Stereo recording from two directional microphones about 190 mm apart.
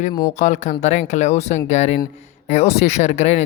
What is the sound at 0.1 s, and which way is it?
Speech, 15° left (ahead or behind).